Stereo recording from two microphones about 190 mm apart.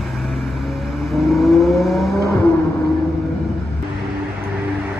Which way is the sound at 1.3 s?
Centre (ahead or behind).